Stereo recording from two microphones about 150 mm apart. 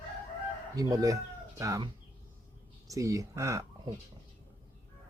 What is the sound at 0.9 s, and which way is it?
Speech, 20° right (ahead or behind).